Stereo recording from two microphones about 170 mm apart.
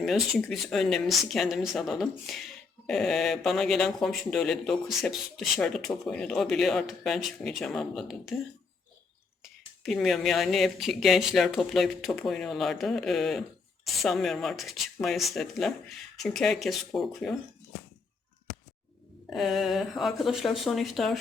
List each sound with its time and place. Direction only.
0.0 s speech: centre (ahead or behind)
9.4 s speech: centre (ahead or behind)
19.3 s speech: centre (ahead or behind)